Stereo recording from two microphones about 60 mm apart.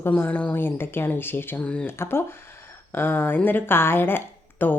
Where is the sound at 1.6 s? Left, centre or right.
Left.